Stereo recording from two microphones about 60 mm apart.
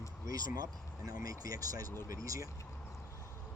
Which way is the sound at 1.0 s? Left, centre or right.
Right.